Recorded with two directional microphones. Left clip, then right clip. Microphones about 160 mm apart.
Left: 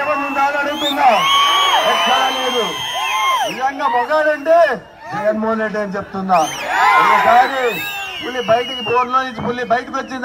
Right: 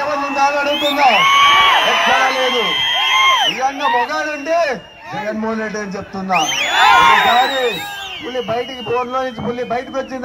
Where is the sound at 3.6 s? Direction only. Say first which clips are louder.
Even; 20° left (ahead or behind).